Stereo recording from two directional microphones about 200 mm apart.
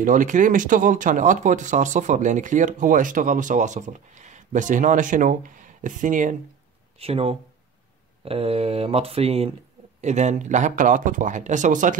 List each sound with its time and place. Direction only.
0.0 s speech: 40° right (ahead or behind)
7.0 s speech: 30° right (ahead or behind)